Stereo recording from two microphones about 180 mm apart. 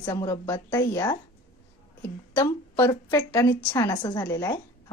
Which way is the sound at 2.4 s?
15° left (ahead or behind).